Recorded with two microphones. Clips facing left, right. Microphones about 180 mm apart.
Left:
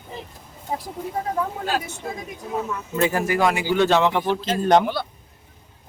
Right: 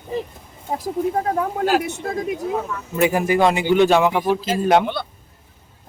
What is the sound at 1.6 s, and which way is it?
Speech, 80° right.